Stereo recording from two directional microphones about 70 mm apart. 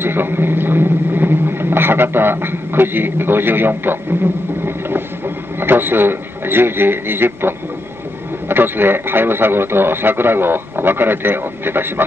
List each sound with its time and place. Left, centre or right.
0.0 s speech: right
4.6 s a sound: right
5.6 s a man's voice: right